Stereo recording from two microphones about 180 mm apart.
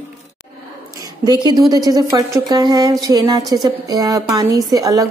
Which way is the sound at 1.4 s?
20° right (ahead or behind).